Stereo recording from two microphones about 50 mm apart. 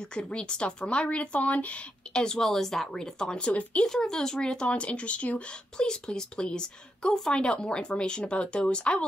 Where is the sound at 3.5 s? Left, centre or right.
Left.